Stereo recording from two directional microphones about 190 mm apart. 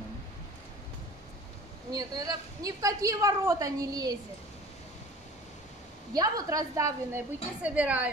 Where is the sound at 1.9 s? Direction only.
20° right (ahead or behind).